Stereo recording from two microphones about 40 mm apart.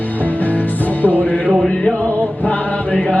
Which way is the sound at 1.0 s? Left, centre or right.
Left.